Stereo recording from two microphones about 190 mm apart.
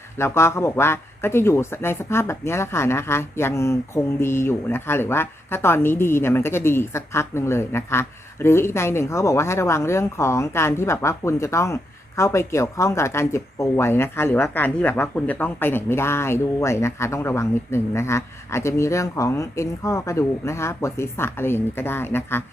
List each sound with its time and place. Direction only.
0.2 s a man's voice: 15° left (ahead or behind)